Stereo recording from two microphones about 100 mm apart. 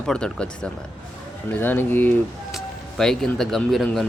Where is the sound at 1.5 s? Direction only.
20° left (ahead or behind).